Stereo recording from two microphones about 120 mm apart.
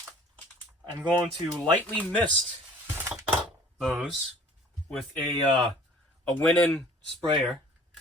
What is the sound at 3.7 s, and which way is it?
Speech, centre (ahead or behind).